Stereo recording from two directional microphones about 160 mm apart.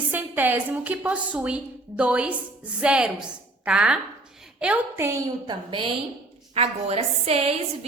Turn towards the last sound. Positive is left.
turn(degrees=-40)  # may be behind; listen again after turning